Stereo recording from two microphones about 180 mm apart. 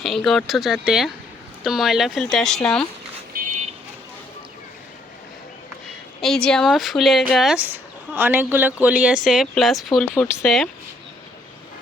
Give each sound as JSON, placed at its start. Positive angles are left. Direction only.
{"t": 0.0, "sound": "a woman's voice", "side_deg": 0}
{"t": 3.3, "sound": "car alarm", "side_deg": -45}
{"t": 6.2, "sound": "a woman's voice", "side_deg": 5}